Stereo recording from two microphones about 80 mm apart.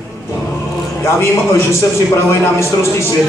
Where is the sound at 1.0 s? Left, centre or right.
Left.